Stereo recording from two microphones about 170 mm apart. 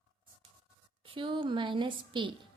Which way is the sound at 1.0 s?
30° right (ahead or behind).